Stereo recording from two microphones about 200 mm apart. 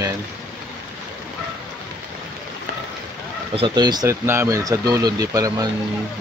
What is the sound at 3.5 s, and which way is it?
Speech, 25° right (ahead or behind).